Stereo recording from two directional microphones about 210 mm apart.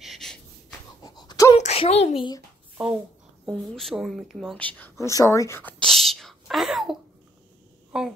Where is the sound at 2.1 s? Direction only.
20° left (ahead or behind).